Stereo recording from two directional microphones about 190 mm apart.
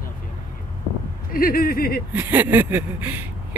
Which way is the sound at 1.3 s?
50° left (ahead or behind).